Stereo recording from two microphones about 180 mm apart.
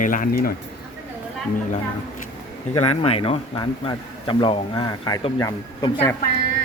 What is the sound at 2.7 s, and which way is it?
Speech, 35° left (ahead or behind).